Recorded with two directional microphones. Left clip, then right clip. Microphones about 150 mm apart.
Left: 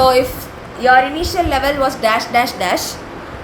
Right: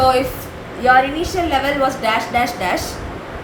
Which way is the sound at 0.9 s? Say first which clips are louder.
Left 2 dB; 45° left (ahead or behind).